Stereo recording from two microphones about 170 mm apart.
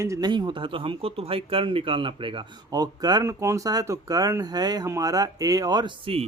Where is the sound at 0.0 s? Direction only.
20° right (ahead or behind).